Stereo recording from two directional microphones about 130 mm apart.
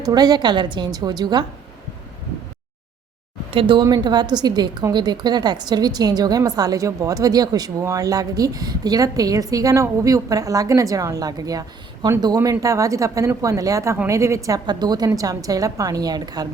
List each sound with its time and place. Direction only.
0.0 s a woman's voice: 30° right (ahead or behind)
3.5 s a woman's voice: 40° right (ahead or behind)